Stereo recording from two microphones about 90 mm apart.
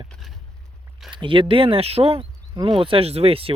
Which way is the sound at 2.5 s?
70° right (ahead or behind).